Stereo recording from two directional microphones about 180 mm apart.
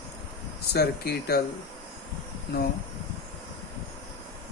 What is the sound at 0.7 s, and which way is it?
Speech, 60° left (ahead or behind).